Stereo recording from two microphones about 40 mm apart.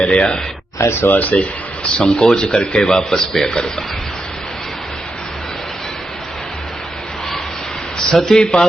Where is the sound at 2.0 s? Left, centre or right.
Left.